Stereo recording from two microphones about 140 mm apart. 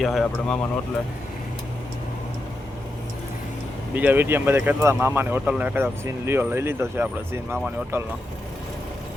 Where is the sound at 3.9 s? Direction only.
15° right (ahead or behind).